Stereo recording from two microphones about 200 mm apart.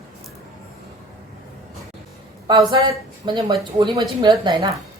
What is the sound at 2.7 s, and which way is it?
A woman's voice, 20° right (ahead or behind).